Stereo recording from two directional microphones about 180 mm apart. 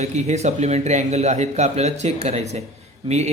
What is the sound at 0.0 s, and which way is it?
A man's voice, 40° right (ahead or behind).